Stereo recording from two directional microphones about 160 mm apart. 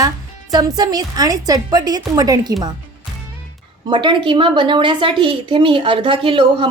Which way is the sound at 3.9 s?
30° right (ahead or behind).